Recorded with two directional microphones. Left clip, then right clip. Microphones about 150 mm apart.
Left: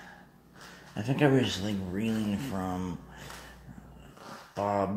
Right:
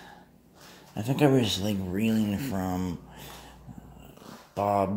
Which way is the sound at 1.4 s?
40° right (ahead or behind).